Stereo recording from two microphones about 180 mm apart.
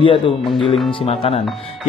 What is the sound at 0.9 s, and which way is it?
Speech, 30° left (ahead or behind).